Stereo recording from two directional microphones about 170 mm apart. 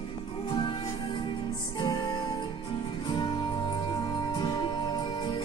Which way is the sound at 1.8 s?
25° left (ahead or behind).